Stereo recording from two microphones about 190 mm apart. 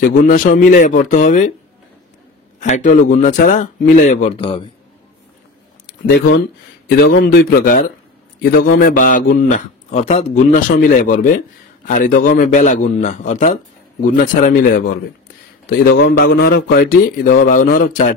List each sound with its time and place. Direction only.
0.0 s a man's voice: 45° left (ahead or behind)
2.6 s speech: 40° left (ahead or behind)
7.0 s a man's voice: 60° left (ahead or behind); by 15.0 s 45° left (ahead or behind)
16.1 s a man's voice: 60° left (ahead or behind)